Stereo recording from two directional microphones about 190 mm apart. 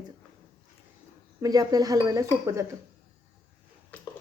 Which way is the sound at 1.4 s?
20° right (ahead or behind).